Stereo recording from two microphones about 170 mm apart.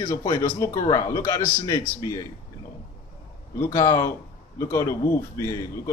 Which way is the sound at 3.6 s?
20° left (ahead or behind).